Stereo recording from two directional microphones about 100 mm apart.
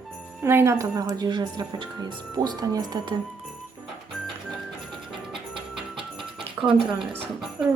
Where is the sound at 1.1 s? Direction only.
45° right (ahead or behind).